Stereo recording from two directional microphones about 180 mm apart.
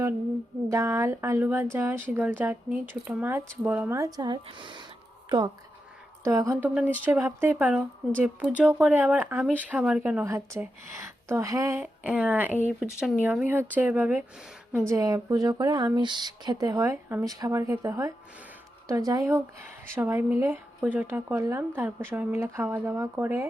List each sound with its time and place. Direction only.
0.7 s speech: 15° right (ahead or behind)
6.2 s speech: 15° right (ahead or behind)